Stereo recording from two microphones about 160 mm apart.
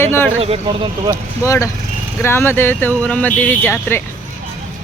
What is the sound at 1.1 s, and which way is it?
Speech, 20° left (ahead or behind).